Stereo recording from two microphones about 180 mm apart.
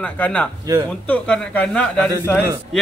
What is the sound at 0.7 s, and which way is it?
Speech, 20° right (ahead or behind).